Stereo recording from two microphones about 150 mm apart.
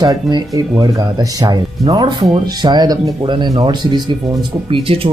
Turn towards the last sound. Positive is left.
turn(degrees=-35)  # may be behind; listen again after turning